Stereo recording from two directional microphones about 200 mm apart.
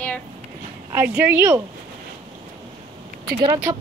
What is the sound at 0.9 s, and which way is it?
Speech, 10° right (ahead or behind).